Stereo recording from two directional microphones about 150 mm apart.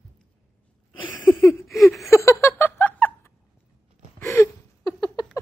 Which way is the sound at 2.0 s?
20° left (ahead or behind).